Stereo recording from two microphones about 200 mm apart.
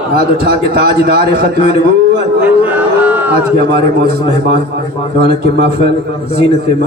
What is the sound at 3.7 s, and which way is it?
A man's voice, 50° right (ahead or behind).